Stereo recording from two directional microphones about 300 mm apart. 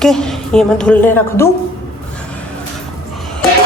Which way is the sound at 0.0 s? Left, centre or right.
Centre.